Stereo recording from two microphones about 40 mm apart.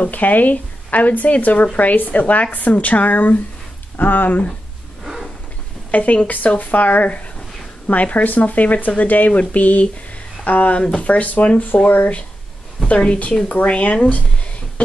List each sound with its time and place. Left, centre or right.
0.0 s a woman's voice: left
5.0 s a sound: centre
5.9 s speech: left
12.8 s speech: left